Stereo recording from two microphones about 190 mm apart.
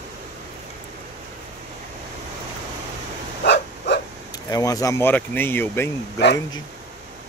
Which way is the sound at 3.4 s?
60° left (ahead or behind).